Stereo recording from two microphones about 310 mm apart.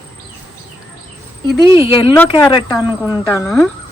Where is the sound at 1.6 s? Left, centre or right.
Centre.